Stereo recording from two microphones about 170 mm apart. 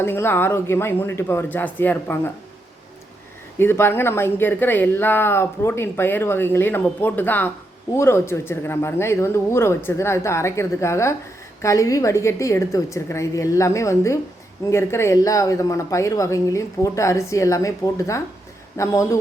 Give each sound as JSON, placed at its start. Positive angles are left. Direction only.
{"t": 0.0, "sound": "speech", "side_deg": 15}
{"t": 3.6, "sound": "speech", "side_deg": 15}